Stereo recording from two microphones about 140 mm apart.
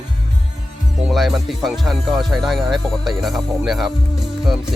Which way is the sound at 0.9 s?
Centre (ahead or behind).